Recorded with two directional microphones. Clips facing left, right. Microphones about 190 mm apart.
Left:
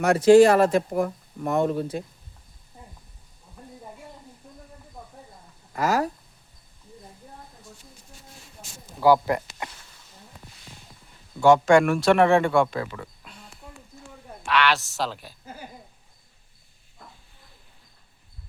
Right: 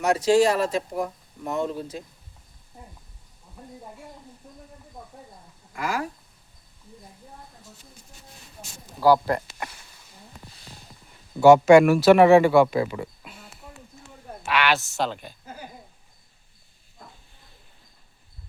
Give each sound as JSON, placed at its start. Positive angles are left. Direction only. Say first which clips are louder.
{"t": 0.0, "sound": "speech", "louder": "left 5 dB", "side_deg": 55}
{"t": 3.6, "sound": "a sound", "louder": "right 1 dB", "side_deg": -5}
{"t": 5.7, "sound": "speech", "louder": "left 5 dB", "side_deg": 40}
{"t": 9.0, "sound": "speech", "louder": "even", "side_deg": 15}
{"t": 11.3, "sound": "speech", "louder": "right 4 dB", "side_deg": -5}